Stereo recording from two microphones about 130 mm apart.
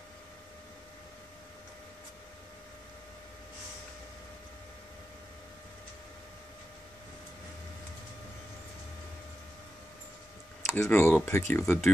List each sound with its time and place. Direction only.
10.7 s speech: 20° left (ahead or behind)